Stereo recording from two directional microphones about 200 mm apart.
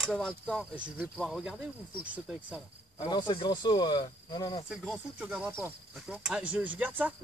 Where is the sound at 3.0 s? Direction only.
20° left (ahead or behind).